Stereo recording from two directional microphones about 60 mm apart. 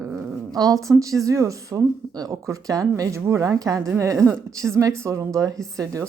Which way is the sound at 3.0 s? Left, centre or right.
Right.